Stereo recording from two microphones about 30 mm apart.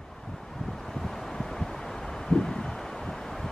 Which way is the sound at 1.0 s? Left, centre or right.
Centre.